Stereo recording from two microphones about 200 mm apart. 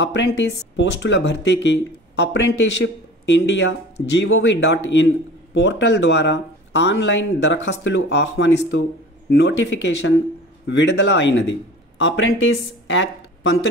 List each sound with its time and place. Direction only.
0.0 s speech: 60° left (ahead or behind)